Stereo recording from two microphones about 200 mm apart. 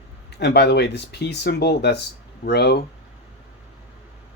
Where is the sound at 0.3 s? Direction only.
55° left (ahead or behind).